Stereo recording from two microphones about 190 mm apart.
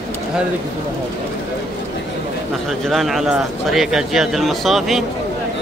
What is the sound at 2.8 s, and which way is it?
Speech, centre (ahead or behind).